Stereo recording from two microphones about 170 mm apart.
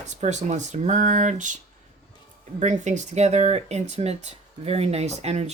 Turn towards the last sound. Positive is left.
turn(degrees=-40)  # may be behind; listen again after turning